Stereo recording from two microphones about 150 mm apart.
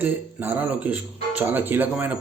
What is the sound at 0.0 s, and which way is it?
A man's voice, 10° right (ahead or behind).